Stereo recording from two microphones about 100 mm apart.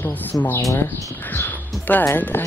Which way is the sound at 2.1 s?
20° left (ahead or behind).